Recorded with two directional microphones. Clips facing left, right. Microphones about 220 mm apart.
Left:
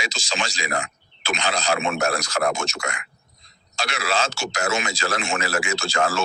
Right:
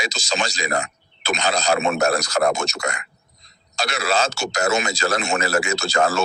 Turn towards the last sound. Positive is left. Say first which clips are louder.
# right 3 dB
turn(degrees=-40)  # may be behind; listen again after turning